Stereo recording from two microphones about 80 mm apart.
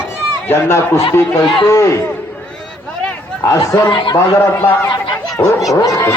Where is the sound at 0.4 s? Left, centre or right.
Left.